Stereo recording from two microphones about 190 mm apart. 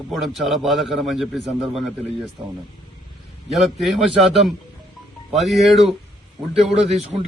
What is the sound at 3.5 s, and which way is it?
A man's voice, centre (ahead or behind).